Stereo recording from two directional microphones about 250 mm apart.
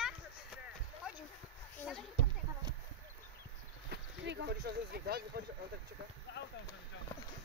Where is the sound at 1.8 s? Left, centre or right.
Centre.